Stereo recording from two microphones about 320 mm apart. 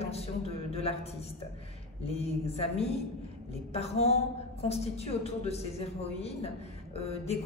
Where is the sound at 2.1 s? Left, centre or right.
Centre.